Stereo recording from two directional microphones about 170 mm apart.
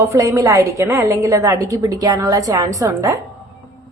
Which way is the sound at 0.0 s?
20° right (ahead or behind).